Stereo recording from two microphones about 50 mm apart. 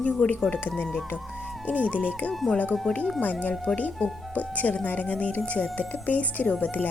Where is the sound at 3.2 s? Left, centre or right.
Left.